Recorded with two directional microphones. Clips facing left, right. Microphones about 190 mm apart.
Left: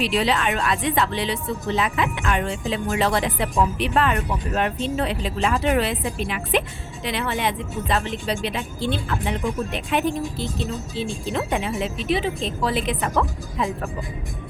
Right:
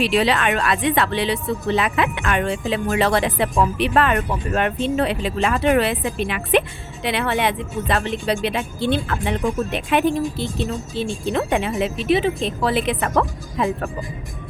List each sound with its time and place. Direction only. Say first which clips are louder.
0.0 s speech: right 3 dB; 65° right (ahead or behind)